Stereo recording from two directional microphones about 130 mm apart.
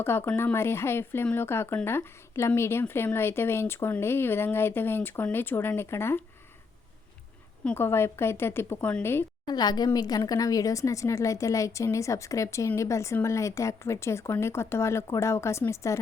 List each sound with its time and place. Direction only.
0.0 s speech: 15° left (ahead or behind)
7.6 s speech: 15° left (ahead or behind)
9.5 s a woman's voice: 30° left (ahead or behind)